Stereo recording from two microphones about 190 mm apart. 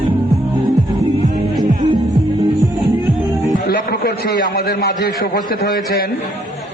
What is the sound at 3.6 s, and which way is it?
A man's voice, 55° left (ahead or behind).